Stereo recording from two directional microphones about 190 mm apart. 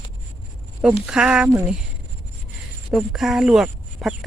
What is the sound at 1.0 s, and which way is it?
Speech, 5° right (ahead or behind).